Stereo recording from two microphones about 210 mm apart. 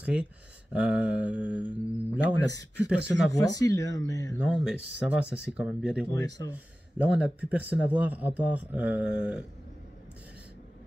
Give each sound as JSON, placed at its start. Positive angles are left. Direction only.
{"t": 0.0, "sound": "speech", "side_deg": -5}
{"t": 2.4, "sound": "speech", "side_deg": 15}
{"t": 4.5, "sound": "speech", "side_deg": -5}